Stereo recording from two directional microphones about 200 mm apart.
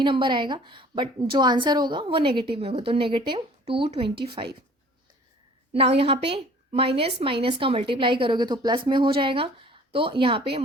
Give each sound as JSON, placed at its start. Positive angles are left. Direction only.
{"t": 0.0, "sound": "a woman's voice", "side_deg": -25}
{"t": 6.0, "sound": "a woman's voice", "side_deg": -30}